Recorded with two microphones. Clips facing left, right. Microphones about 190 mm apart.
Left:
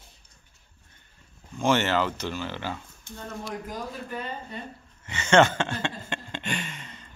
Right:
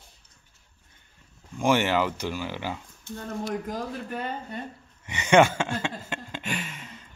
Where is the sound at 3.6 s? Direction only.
55° right (ahead or behind).